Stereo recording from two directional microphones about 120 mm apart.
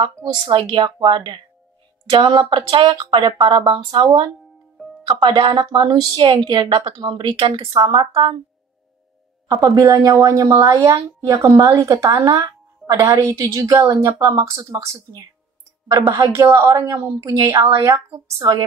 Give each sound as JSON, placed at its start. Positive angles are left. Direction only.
{"t": 0.5, "sound": "a woman's voice", "side_deg": -45}
{"t": 9.5, "sound": "a woman's voice", "side_deg": -30}